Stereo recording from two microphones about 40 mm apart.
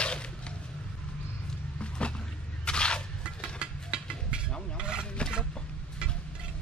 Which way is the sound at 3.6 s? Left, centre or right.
Right.